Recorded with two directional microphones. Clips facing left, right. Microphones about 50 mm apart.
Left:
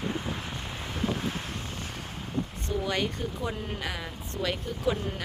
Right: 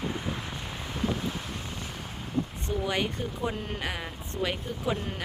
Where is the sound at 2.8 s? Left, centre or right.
Right.